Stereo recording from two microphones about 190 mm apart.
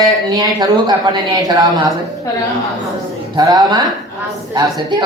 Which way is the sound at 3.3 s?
20° right (ahead or behind).